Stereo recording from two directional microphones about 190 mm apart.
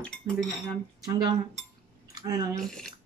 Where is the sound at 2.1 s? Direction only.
20° right (ahead or behind).